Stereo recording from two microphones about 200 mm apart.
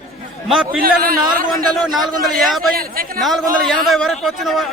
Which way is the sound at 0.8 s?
45° right (ahead or behind).